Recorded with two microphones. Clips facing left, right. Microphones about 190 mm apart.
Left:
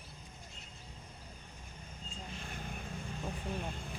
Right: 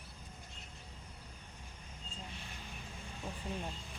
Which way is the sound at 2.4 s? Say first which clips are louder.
Left 6 dB; 50° left (ahead or behind).